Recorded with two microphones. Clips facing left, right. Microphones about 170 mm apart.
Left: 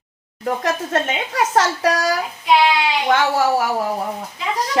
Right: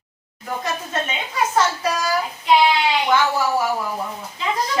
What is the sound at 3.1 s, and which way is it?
Speech, 75° left (ahead or behind).